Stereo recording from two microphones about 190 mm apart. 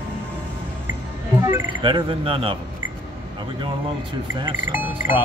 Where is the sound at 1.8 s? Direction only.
25° right (ahead or behind).